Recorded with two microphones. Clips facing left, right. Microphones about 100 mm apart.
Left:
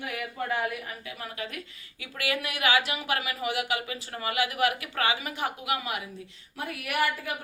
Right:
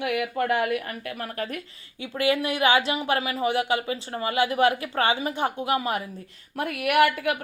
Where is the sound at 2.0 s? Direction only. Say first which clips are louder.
Right 8 dB; 25° right (ahead or behind).